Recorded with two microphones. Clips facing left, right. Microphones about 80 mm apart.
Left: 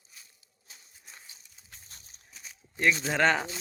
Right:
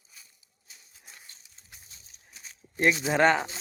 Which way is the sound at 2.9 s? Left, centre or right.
Centre.